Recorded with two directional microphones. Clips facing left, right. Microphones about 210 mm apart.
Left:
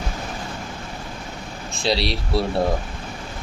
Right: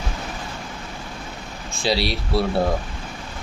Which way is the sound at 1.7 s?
Centre (ahead or behind).